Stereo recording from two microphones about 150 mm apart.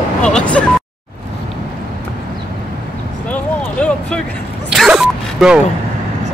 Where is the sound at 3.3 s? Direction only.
5° left (ahead or behind).